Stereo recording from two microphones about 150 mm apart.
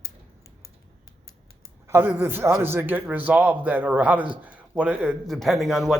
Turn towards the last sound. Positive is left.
turn(degrees=0)  # may be behind; listen again after turning